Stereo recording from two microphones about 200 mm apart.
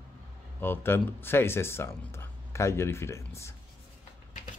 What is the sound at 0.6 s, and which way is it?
Speech, 10° left (ahead or behind).